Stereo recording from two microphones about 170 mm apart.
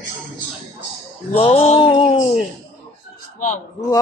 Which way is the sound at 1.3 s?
35° left (ahead or behind).